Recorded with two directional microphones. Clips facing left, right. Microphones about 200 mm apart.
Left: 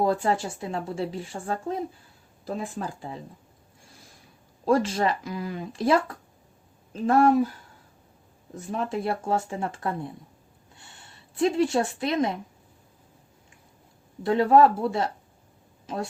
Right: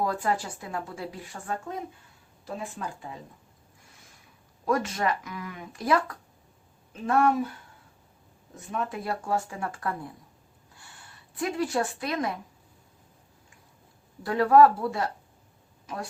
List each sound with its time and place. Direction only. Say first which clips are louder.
0.0 s speech: left 4 dB; 25° left (ahead or behind)
4.6 s speech: left 4 dB; 30° left (ahead or behind)
8.5 s speech: left 4 dB; 30° left (ahead or behind)
10.8 s a sound: even; 25° left (ahead or behind)
14.3 s speech: left 1 dB; 25° left (ahead or behind)